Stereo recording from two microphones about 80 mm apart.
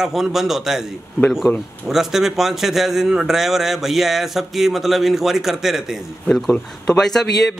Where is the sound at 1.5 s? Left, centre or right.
Left.